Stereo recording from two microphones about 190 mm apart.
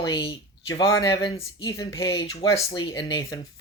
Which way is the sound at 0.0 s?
25° left (ahead or behind).